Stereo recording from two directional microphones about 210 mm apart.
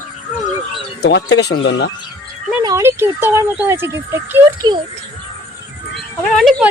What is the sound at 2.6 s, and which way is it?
Speech, 15° right (ahead or behind).